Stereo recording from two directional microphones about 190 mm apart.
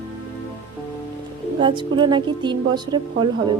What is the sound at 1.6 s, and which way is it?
A woman's voice, 25° right (ahead or behind).